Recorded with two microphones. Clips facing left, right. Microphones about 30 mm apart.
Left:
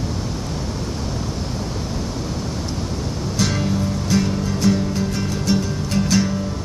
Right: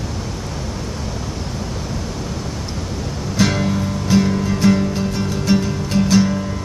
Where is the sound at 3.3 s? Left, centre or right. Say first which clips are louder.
Right 4 dB; centre.